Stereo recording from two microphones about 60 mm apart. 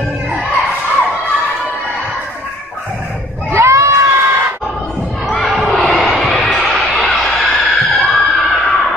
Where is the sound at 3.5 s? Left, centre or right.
Right.